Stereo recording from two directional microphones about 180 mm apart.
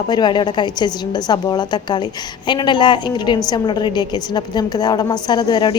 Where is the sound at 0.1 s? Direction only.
25° left (ahead or behind).